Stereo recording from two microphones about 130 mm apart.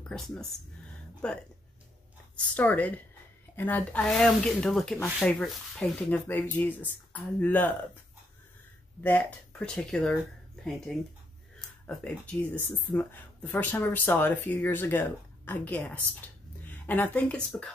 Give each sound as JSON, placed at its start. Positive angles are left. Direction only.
{"t": 0.1, "sound": "speech", "side_deg": 5}
{"t": 9.0, "sound": "speech", "side_deg": 10}
{"t": 11.8, "sound": "a woman's voice", "side_deg": 10}